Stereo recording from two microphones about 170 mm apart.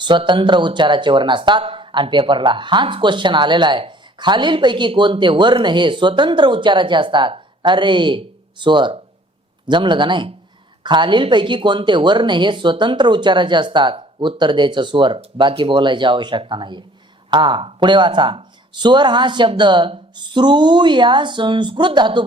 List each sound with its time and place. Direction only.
0.0 s speech: 30° right (ahead or behind)